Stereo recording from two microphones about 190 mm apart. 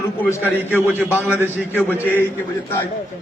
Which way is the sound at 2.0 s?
10° left (ahead or behind).